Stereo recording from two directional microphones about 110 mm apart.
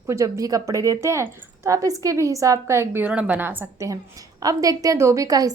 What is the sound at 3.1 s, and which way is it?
Speech, 10° right (ahead or behind).